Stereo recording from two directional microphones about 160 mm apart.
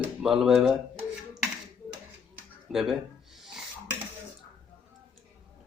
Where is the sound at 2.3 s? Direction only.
Centre (ahead or behind).